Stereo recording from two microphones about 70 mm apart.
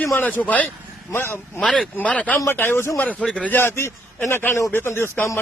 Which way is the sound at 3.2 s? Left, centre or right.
Centre.